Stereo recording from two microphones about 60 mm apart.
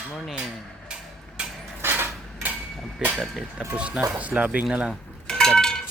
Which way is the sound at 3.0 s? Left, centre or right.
Right.